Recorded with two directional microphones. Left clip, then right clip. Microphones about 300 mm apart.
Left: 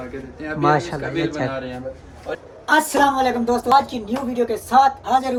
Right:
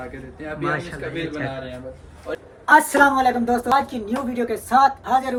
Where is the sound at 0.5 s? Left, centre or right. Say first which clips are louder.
Left 8 dB; centre.